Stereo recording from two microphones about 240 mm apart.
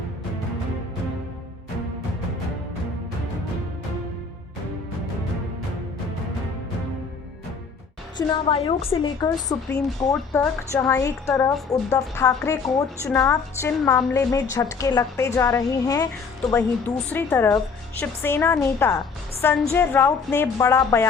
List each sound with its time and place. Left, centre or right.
8.3 s a woman's voice: left